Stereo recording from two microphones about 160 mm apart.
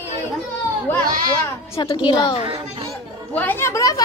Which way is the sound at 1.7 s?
30° left (ahead or behind).